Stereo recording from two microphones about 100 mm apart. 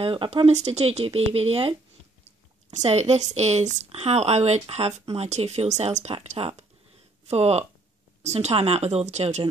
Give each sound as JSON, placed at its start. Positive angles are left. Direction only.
{"t": 0.0, "sound": "speech", "side_deg": -60}
{"t": 2.8, "sound": "speech", "side_deg": -90}
{"t": 7.2, "sound": "speech", "side_deg": -90}